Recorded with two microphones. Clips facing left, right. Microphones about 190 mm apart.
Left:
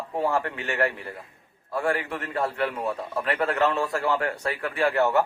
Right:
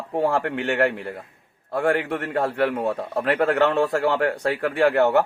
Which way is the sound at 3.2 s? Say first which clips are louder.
Right 5 dB; 60° right (ahead or behind).